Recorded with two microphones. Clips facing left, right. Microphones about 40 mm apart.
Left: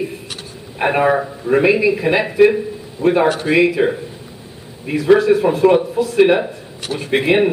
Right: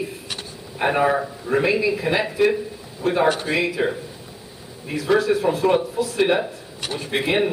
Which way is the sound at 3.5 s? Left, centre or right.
Centre.